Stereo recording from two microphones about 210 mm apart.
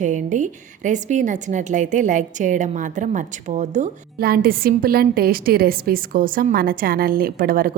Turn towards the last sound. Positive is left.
turn(degrees=-45)  # may be behind; listen again after turning